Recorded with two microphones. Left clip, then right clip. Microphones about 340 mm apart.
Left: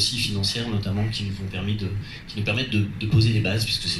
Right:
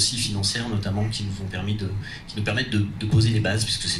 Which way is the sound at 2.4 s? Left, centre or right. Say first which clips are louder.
Even; right.